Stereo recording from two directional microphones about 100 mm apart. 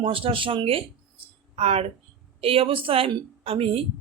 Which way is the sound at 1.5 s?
90° right.